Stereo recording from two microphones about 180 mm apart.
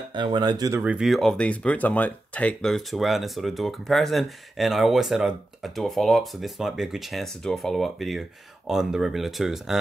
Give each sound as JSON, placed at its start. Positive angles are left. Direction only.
{"t": 0.1, "sound": "speech", "side_deg": -25}
{"t": 0.8, "sound": "speech", "side_deg": -5}